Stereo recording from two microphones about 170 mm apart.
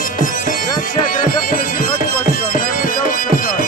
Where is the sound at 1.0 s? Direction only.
55° left (ahead or behind).